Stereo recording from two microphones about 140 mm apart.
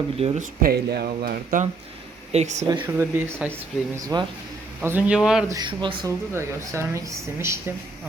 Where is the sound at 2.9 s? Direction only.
15° right (ahead or behind).